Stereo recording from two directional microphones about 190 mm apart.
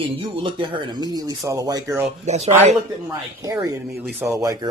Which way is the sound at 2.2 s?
35° right (ahead or behind).